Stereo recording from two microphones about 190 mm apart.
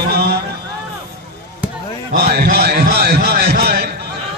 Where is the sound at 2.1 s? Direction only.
55° right (ahead or behind).